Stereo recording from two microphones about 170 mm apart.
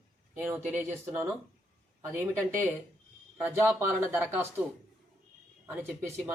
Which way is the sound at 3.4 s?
15° right (ahead or behind).